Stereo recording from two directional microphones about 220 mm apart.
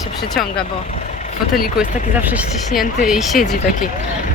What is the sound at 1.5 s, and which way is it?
Speech, 40° left (ahead or behind).